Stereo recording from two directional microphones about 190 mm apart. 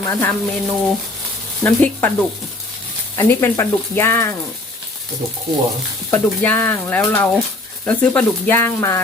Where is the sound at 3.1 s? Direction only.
15° left (ahead or behind).